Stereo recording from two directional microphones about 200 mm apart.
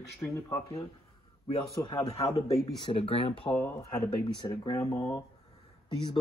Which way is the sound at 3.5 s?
10° left (ahead or behind).